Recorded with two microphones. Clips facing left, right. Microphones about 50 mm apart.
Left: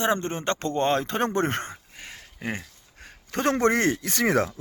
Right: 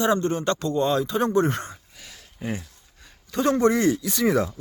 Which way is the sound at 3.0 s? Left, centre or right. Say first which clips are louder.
Right 2 dB; left.